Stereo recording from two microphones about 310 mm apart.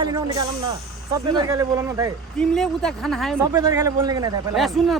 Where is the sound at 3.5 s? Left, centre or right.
Centre.